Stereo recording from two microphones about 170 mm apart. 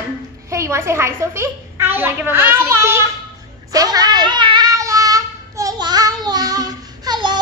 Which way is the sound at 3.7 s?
20° right (ahead or behind).